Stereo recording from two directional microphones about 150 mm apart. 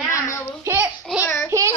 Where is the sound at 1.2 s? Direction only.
15° left (ahead or behind).